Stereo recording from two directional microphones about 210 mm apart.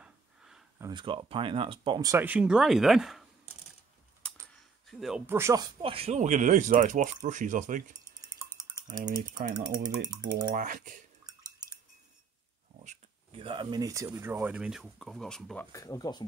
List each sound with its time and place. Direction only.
0.0 s a sound: 5° right (ahead or behind)
0.8 s speech: 20° right (ahead or behind); by 3.3 s centre (ahead or behind)
5.0 s speech: 5° right (ahead or behind)
5.8 s speech: 25° right (ahead or behind)
8.5 s a sound: 20° right (ahead or behind)
9.0 s speech: 35° right (ahead or behind)
9.6 s speech: 20° right (ahead or behind)
10.5 s speech: 40° right (ahead or behind)
12.8 s speech: 25° right (ahead or behind); by 15.6 s 5° left (ahead or behind)
15.7 s speech: 15° left (ahead or behind)